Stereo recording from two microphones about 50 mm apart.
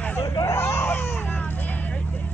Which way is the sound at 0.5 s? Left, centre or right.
Left.